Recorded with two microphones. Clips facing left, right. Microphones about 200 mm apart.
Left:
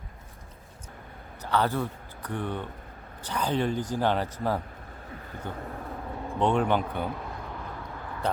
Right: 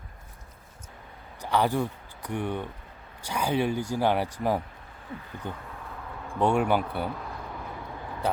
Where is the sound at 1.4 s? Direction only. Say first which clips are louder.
Right 1 dB; 15° right (ahead or behind).